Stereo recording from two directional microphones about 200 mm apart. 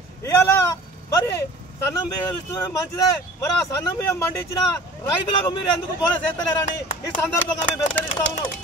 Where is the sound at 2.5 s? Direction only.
15° left (ahead or behind).